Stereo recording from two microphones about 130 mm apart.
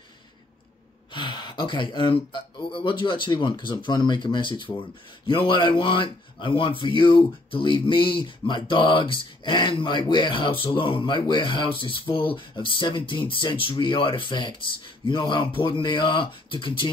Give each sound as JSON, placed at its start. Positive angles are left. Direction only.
{"t": 1.1, "sound": "speech", "side_deg": 35}